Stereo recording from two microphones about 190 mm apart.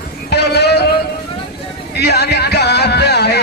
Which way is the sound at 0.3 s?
60° left (ahead or behind).